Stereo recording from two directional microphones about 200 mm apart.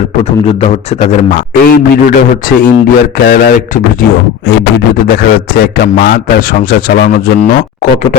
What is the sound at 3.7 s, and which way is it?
Speech, 40° left (ahead or behind).